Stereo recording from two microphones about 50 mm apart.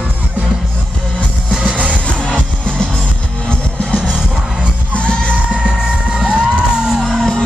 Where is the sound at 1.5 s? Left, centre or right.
Right.